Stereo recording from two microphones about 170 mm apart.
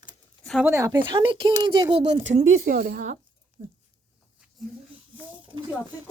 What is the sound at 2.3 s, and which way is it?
Speech, 40° right (ahead or behind).